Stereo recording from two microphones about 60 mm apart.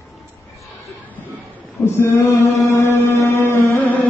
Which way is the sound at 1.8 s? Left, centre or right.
Left.